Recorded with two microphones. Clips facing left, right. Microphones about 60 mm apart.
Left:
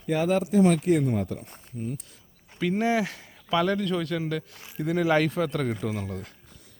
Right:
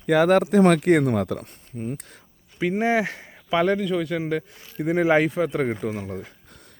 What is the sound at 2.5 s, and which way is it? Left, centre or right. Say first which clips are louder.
Speech: right 3 dB; centre.